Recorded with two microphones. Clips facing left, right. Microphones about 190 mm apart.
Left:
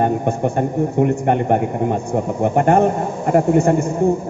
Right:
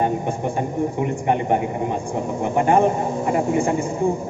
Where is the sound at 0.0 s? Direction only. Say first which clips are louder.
Left 4 dB; 50° left (ahead or behind).